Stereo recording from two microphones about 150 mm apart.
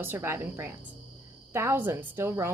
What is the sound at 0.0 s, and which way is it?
Speech, 15° right (ahead or behind).